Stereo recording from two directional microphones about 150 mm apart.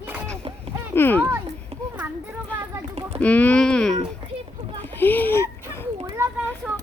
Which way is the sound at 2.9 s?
40° right (ahead or behind).